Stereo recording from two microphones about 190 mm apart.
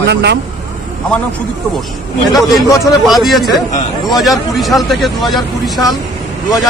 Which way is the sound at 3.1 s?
Centre (ahead or behind).